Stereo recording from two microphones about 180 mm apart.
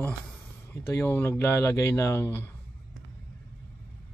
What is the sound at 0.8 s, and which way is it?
Speech, 10° left (ahead or behind).